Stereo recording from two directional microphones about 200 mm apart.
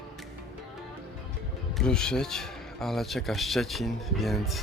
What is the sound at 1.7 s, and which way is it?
Speech, 5° left (ahead or behind).